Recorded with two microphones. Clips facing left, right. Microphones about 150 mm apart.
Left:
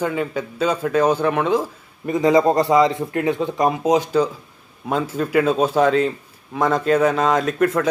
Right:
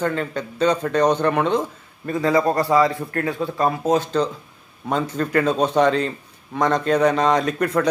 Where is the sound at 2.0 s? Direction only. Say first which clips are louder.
Left 3 dB; 20° left (ahead or behind).